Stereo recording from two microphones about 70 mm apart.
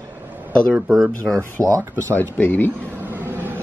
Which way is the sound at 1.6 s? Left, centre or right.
Right.